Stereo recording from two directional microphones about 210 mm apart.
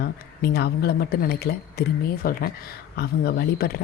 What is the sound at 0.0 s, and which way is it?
A woman's voice, 50° left (ahead or behind).